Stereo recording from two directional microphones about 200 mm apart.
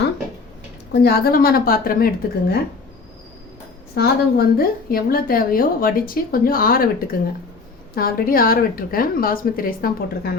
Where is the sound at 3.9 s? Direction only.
50° left (ahead or behind).